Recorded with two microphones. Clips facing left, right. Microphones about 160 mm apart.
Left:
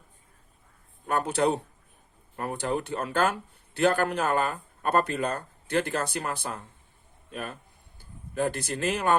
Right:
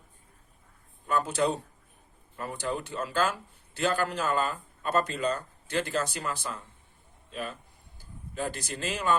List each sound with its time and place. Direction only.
1.0 s a man's voice: 60° left (ahead or behind)